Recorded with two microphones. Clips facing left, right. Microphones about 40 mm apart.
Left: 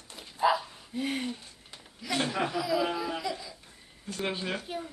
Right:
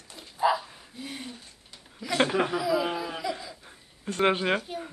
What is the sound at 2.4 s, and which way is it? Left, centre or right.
Speech, centre.